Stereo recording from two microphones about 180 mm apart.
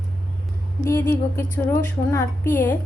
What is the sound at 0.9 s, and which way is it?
Speech, 15° left (ahead or behind).